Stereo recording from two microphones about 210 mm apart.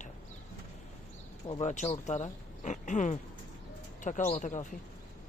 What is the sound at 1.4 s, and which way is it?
Speech, 30° left (ahead or behind).